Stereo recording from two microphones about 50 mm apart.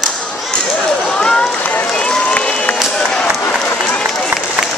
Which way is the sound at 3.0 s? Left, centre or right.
Centre.